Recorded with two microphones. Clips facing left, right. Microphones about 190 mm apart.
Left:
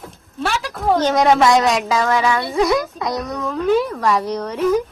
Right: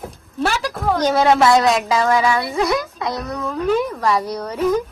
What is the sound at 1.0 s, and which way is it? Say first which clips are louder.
Speech: right 1 dB; 5° right (ahead or behind).